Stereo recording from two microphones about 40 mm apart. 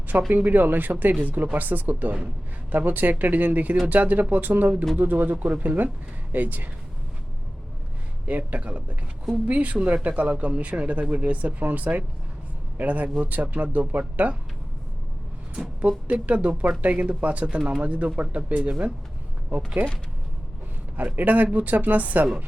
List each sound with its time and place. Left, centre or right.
0.3 s speech: right
8.3 s speech: right
15.8 s speech: right
20.9 s speech: right